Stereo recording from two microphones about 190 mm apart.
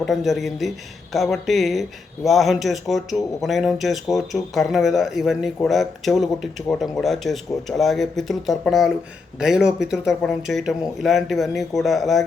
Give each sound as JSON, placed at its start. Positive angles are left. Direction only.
{"t": 0.0, "sound": "speech", "side_deg": 0}